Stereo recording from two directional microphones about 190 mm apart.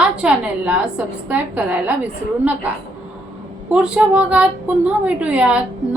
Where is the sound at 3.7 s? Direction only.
5° right (ahead or behind).